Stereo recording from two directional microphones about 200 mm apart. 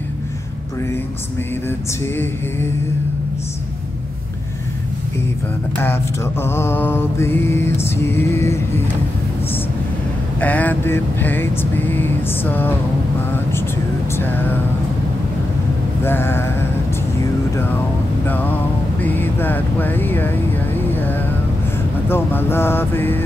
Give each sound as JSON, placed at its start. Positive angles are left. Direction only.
{"t": 6.4, "sound": "vehicle", "side_deg": 10}
{"t": 10.4, "sound": "vehicle", "side_deg": 5}
{"t": 14.1, "sound": "music", "side_deg": 10}
{"t": 16.0, "sound": "vehicle", "side_deg": 10}
{"t": 18.2, "sound": "vehicle", "side_deg": 10}
{"t": 20.9, "sound": "music", "side_deg": 10}
{"t": 22.1, "sound": "vehicle", "side_deg": 10}